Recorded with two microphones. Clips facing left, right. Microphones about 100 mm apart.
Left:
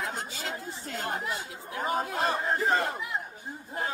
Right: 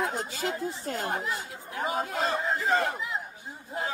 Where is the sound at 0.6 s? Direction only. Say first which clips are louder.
Right 5 dB; 45° right (ahead or behind).